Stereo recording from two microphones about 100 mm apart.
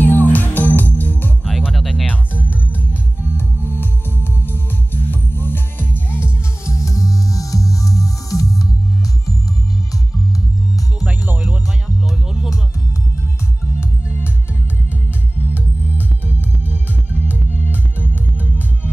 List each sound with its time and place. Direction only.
0.0 s music: 20° left (ahead or behind)
1.4 s music: 5° right (ahead or behind)
1.7 s music: 5° left (ahead or behind)
2.7 s music: 20° left (ahead or behind)
6.6 s music: 30° left (ahead or behind)
11.1 s music: 15° right (ahead or behind)
13.7 s music: 20° left (ahead or behind)
17.1 s music: 20° left (ahead or behind)